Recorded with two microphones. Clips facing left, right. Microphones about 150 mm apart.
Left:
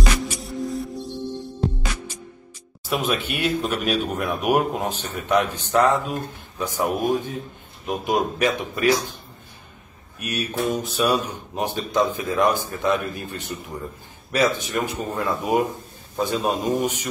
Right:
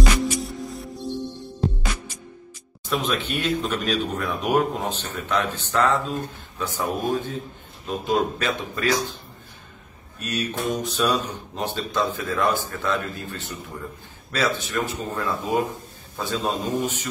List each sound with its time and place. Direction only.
0.2 s music: centre (ahead or behind)
2.8 s speech: 10° left (ahead or behind)
10.1 s speech: 10° left (ahead or behind)